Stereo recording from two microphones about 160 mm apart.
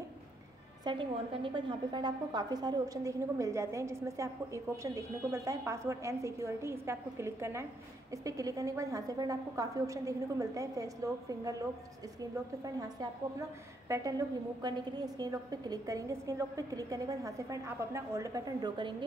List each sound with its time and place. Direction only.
0.8 s a woman's voice: 30° right (ahead or behind)